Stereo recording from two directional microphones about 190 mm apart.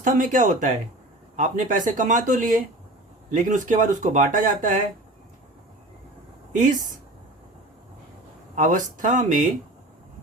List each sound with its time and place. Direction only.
0.0 s speech: 45° right (ahead or behind)
6.5 s speech: 45° right (ahead or behind)
8.5 s speech: 45° right (ahead or behind)